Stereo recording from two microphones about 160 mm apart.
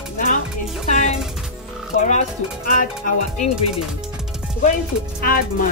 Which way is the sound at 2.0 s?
50° left (ahead or behind).